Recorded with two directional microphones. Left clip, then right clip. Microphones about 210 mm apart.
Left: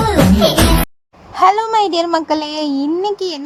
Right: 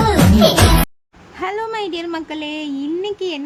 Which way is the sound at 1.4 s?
30° left (ahead or behind).